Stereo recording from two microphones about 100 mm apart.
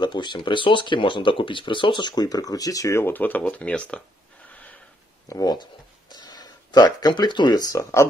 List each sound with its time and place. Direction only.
0.0 s speech: 50° left (ahead or behind); by 4.0 s 10° left (ahead or behind)
5.3 s speech: 40° left (ahead or behind)
7.7 s speech: 30° left (ahead or behind)